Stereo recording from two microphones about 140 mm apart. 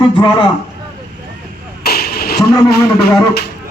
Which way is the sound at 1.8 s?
90° left.